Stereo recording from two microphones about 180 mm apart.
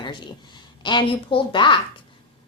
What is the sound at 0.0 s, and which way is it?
A woman's voice, 25° left (ahead or behind).